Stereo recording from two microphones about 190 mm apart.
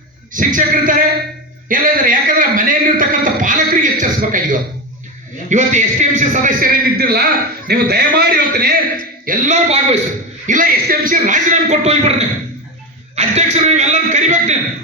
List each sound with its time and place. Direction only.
0.3 s a man's voice: 45° right (ahead or behind)
13.1 s a man's voice: 35° right (ahead or behind)